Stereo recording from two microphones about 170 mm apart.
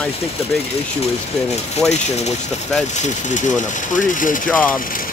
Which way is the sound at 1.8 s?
5° left (ahead or behind).